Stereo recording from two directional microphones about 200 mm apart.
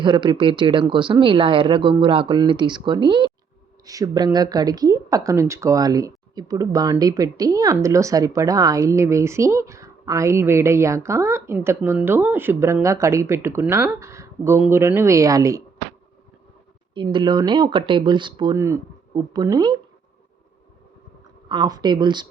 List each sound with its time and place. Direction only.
0.0 s speech: 25° right (ahead or behind)
16.9 s speech: 25° right (ahead or behind)
21.5 s speech: 20° right (ahead or behind)